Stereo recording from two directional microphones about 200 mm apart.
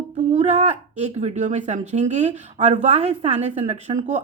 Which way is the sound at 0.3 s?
35° right (ahead or behind).